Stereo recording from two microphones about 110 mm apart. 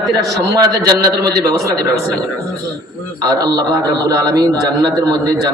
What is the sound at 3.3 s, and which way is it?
A man's voice, 35° right (ahead or behind).